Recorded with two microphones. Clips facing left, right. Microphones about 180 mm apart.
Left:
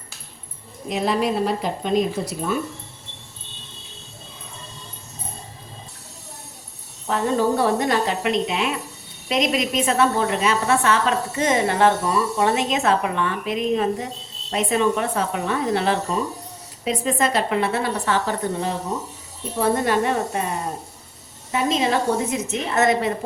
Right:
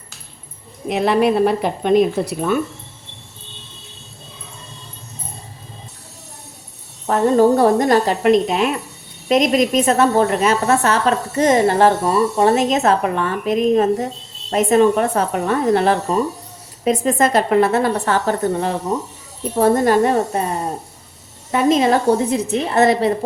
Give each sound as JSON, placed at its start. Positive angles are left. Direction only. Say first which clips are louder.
{"t": 0.9, "sound": "a woman's voice", "louder": "right 6 dB", "side_deg": -65}
{"t": 7.1, "sound": "a woman's voice", "louder": "right 7 dB", "side_deg": -45}
{"t": 18.9, "sound": "a woman's voice", "louder": "right 6 dB", "side_deg": -65}
{"t": 19.5, "sound": "speech", "louder": "right 6 dB", "side_deg": -45}
{"t": 21.5, "sound": "a woman's voice", "louder": "right 6 dB", "side_deg": -50}
{"t": 22.3, "sound": "speech", "louder": "right 6 dB", "side_deg": -35}